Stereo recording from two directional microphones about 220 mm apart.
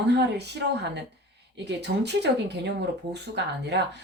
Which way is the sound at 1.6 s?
50° right (ahead or behind).